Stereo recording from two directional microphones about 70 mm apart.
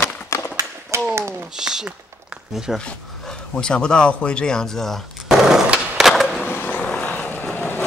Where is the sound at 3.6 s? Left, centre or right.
Centre.